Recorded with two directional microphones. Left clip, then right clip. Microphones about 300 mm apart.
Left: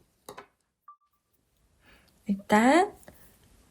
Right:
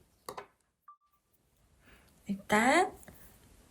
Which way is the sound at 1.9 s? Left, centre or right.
Centre.